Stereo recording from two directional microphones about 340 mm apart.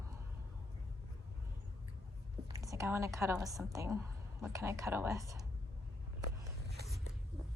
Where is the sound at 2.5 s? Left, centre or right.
Centre.